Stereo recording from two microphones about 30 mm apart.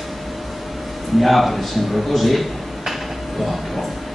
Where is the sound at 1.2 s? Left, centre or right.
Centre.